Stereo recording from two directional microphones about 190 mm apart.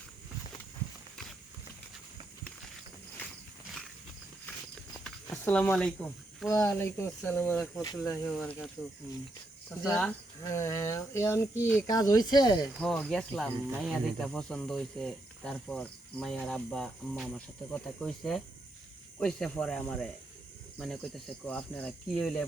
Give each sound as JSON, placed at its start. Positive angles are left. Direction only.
{"t": 5.3, "sound": "speech", "side_deg": 10}
{"t": 6.5, "sound": "speech", "side_deg": 15}
{"t": 10.0, "sound": "speech", "side_deg": 10}
{"t": 11.5, "sound": "speech", "side_deg": -10}
{"t": 11.8, "sound": "speech", "side_deg": 20}
{"t": 12.7, "sound": "speech", "side_deg": 5}